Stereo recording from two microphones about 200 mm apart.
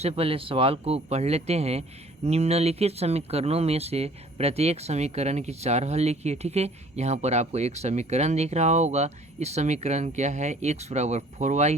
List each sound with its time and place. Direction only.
0.0 s speech: 30° right (ahead or behind)